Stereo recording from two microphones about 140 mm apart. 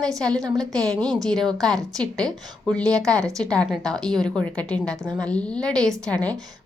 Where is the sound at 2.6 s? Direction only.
5° left (ahead or behind).